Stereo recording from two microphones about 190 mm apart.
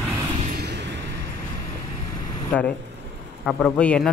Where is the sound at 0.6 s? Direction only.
60° right (ahead or behind).